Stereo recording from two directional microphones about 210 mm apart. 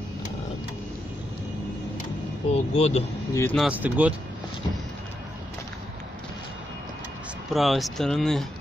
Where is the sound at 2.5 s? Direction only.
30° left (ahead or behind).